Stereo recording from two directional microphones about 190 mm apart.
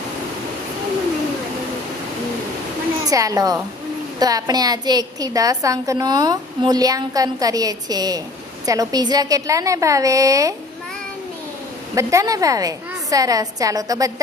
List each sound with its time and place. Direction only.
3.1 s a woman's voice: 20° right (ahead or behind)
11.9 s a woman's voice: 15° right (ahead or behind)